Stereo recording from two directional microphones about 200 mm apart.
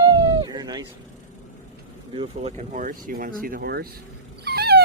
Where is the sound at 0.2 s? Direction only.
20° right (ahead or behind).